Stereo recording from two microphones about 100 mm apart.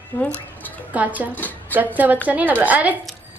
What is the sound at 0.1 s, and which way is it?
Speech, 20° left (ahead or behind).